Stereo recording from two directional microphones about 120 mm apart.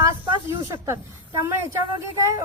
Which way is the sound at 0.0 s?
25° right (ahead or behind).